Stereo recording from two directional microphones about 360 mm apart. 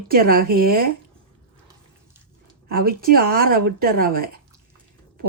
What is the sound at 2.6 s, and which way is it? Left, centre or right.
Speech, right.